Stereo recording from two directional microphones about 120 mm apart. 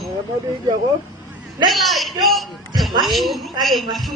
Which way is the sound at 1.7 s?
Centre (ahead or behind).